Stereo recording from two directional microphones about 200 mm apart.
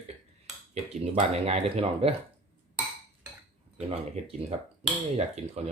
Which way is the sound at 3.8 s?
30° right (ahead or behind).